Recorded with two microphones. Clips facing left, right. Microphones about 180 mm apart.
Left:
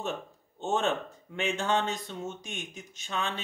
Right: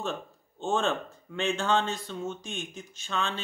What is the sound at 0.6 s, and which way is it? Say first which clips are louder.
Speech: right 1 dB; 20° left (ahead or behind).